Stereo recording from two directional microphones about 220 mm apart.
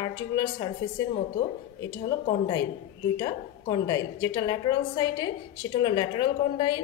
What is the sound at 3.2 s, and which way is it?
A woman's voice, 20° left (ahead or behind).